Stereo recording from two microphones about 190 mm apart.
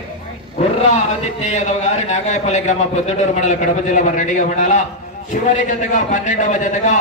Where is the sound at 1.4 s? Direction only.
40° left (ahead or behind).